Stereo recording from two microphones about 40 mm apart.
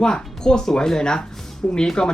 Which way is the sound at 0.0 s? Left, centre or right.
Left.